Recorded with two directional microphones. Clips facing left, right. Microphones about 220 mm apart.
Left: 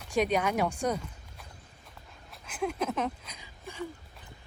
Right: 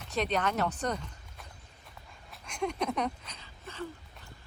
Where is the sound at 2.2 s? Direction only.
5° left (ahead or behind).